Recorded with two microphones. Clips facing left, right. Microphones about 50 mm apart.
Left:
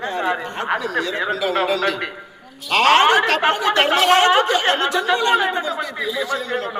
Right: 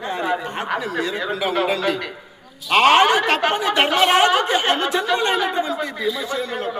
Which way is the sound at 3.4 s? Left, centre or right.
Left.